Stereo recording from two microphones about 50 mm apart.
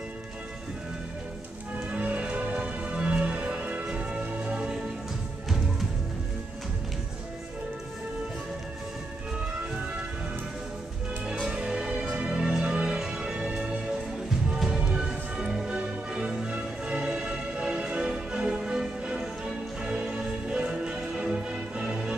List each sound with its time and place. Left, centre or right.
1.9 s music: right
11.4 s music: centre